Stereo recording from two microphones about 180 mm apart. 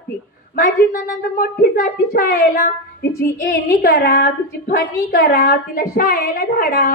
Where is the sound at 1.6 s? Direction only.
55° left (ahead or behind).